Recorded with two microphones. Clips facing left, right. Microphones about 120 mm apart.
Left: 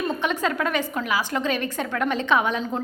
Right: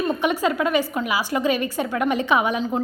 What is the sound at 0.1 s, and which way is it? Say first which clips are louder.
A woman's voice: right 3 dB; 10° right (ahead or behind).